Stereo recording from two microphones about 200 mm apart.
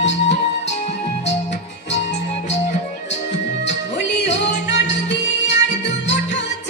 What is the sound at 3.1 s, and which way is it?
Music, 60° left (ahead or behind).